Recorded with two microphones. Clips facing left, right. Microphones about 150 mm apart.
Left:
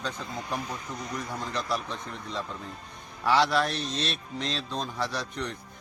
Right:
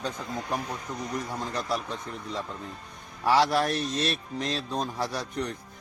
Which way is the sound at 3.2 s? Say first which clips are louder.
Right 1 dB; 45° right (ahead or behind).